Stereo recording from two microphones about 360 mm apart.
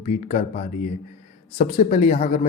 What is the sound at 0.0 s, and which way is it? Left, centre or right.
Speech, centre.